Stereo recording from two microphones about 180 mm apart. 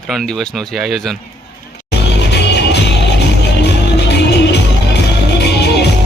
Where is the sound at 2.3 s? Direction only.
70° left (ahead or behind).